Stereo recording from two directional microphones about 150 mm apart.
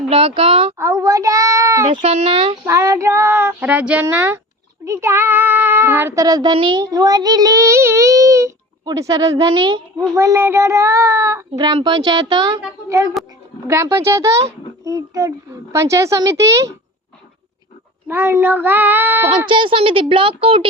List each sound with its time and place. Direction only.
0.1 s speech: 40° right (ahead or behind)
0.8 s a child's voice: 20° right (ahead or behind)
2.0 s speech: 40° right (ahead or behind)
2.6 s child singing: 20° right (ahead or behind)
4.9 s speech: 20° right (ahead or behind)
10.2 s speech: 20° right (ahead or behind)
13.2 s a sound: centre (ahead or behind)
13.7 s speech: 20° right (ahead or behind)
18.1 s child singing: 15° right (ahead or behind)
19.5 s speech: 35° right (ahead or behind)